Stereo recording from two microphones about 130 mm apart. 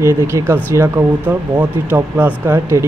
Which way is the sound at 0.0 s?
20° right (ahead or behind).